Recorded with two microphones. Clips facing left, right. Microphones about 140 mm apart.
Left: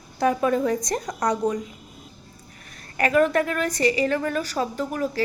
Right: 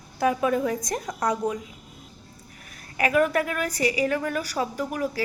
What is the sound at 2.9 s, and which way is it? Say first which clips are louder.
A woman's voice: left 2 dB; 5° right (ahead or behind).